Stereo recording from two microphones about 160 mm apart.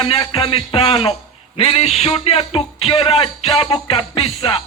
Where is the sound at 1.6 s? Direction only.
40° left (ahead or behind).